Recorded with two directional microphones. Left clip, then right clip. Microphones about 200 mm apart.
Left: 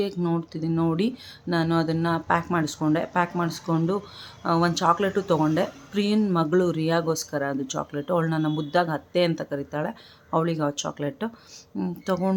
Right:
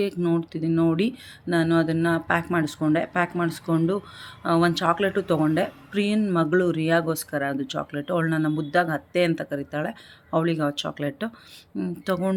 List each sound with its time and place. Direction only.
0.0 s speech: 5° left (ahead or behind)